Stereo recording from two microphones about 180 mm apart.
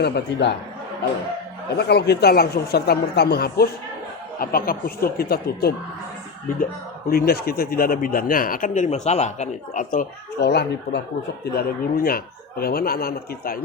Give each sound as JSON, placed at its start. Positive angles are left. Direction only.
{"t": 0.0, "sound": "speech", "side_deg": 70}
{"t": 1.7, "sound": "speech", "side_deg": 65}
{"t": 7.1, "sound": "speech", "side_deg": 55}
{"t": 10.5, "sound": "speech", "side_deg": 70}
{"t": 11.5, "sound": "speech", "side_deg": 55}